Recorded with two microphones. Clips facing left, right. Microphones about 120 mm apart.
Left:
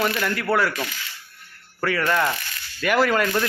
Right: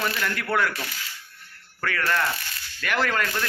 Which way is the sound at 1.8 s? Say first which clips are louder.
Left 4 dB; 10° left (ahead or behind).